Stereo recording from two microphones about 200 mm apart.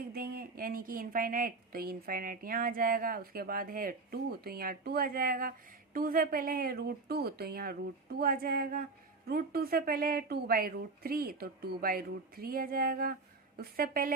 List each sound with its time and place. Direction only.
0.1 s a woman's voice: 50° right (ahead or behind)